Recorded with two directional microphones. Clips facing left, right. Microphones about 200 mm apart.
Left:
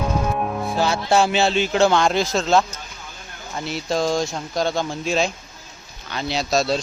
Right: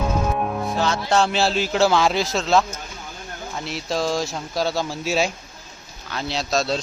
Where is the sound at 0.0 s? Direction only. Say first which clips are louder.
Even; centre (ahead or behind).